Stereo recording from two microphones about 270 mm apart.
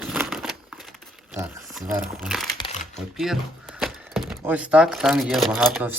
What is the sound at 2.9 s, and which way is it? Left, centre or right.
Speech, centre.